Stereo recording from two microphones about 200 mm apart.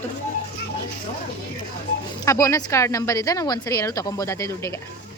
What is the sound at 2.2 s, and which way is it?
Speech, 15° left (ahead or behind).